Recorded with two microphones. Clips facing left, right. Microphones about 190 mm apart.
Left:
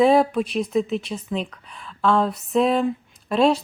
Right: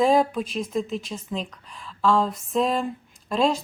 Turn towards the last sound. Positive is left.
turn(degrees=5)  # may be behind; listen again after turning